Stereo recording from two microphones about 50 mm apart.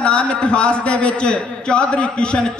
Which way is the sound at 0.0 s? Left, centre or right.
Left.